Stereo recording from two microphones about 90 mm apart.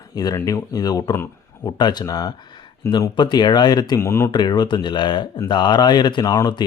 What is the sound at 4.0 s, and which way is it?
Speech, 30° left (ahead or behind).